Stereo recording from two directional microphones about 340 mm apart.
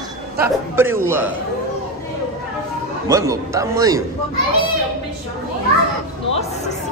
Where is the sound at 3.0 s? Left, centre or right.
Centre.